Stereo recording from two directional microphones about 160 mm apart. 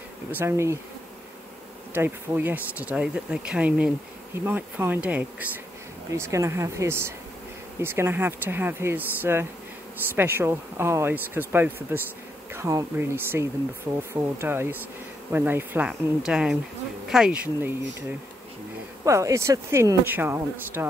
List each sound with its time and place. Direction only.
0.3 s speech: 15° right (ahead or behind)
2.0 s a woman's voice: 10° right (ahead or behind)
19.0 s speech: 20° right (ahead or behind)